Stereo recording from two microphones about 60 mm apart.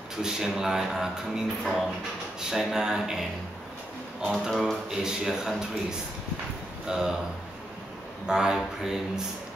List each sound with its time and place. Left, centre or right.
0.2 s speech: centre
4.3 s speech: centre
6.9 s speech: centre
8.3 s speech: centre